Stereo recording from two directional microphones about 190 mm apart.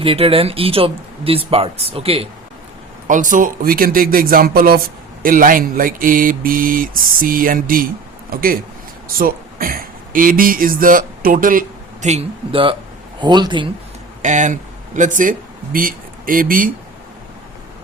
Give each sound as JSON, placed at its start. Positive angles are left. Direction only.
{"t": 0.0, "sound": "speech", "side_deg": -30}
{"t": 3.1, "sound": "speech", "side_deg": -45}
{"t": 12.0, "sound": "speech", "side_deg": -30}
{"t": 14.2, "sound": "speech", "side_deg": -40}